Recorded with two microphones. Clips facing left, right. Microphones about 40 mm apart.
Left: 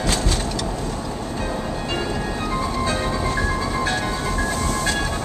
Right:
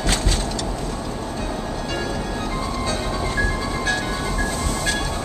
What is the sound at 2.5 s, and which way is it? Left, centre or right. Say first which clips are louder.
Music: left 4 dB; centre.